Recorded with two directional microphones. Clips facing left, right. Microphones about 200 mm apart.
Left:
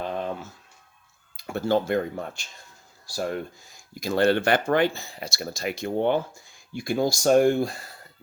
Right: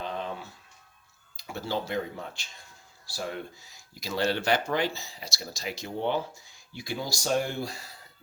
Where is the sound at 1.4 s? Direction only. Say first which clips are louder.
Left 9 dB; 55° left (ahead or behind).